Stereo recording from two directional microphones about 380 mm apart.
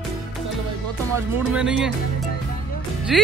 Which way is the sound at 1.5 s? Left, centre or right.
Centre.